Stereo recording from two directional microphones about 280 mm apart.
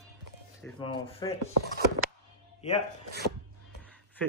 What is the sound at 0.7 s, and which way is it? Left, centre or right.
Speech, centre.